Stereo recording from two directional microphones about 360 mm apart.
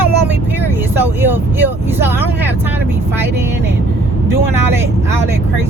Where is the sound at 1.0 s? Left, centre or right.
Centre.